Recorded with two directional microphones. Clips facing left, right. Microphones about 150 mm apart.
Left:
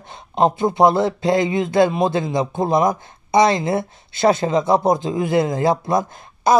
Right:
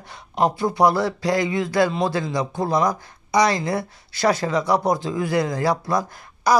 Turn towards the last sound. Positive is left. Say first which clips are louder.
# left 3 dB
turn(degrees=25)  # may be behind; listen again after turning